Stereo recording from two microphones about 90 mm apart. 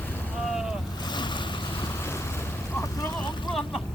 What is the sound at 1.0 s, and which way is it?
Boat, 55° left (ahead or behind).